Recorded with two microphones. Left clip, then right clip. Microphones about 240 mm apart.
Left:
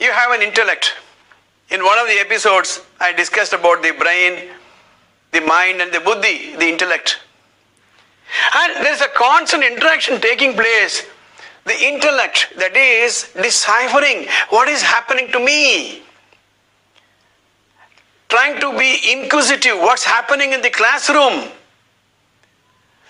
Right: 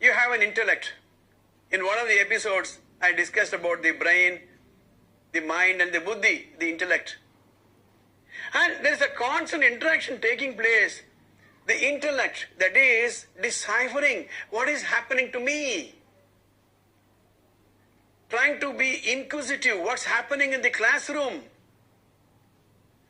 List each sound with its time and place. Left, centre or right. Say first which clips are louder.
0.0 s a sound: left 7 dB; left
1.7 s a man's voice: left 10 dB; left
8.3 s a man's voice: left 11 dB; left
18.3 s a man's voice: left 10 dB; left